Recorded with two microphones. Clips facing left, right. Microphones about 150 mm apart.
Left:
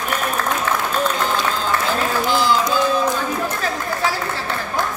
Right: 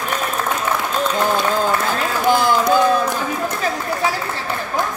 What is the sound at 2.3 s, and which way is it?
Run, 50° right (ahead or behind).